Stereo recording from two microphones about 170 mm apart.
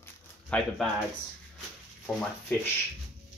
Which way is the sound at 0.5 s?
5° left (ahead or behind).